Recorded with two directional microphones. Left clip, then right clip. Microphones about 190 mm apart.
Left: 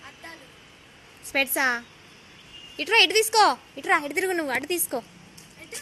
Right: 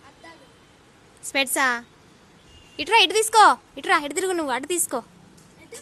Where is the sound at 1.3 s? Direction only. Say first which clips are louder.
Right 2 dB; 20° right (ahead or behind).